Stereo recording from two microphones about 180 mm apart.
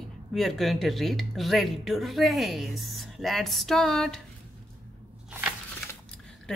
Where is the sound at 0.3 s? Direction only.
Centre (ahead or behind).